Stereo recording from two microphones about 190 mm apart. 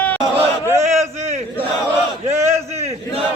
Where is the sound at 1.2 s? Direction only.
35° right (ahead or behind).